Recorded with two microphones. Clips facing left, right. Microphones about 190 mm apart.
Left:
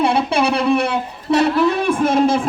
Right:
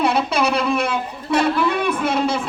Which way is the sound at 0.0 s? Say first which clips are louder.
Left 2 dB; 30° left (ahead or behind).